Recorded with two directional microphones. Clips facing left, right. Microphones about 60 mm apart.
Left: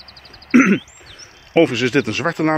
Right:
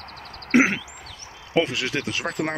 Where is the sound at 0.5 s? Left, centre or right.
Centre.